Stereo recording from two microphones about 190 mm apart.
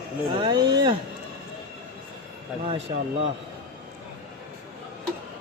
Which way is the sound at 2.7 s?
30° right (ahead or behind).